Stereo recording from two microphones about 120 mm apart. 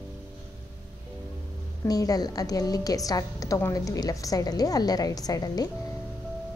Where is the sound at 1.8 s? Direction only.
30° left (ahead or behind).